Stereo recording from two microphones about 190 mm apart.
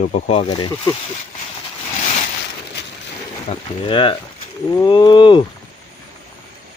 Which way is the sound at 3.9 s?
25° left (ahead or behind).